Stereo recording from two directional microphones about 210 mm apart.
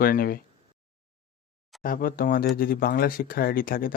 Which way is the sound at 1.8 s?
40° left (ahead or behind).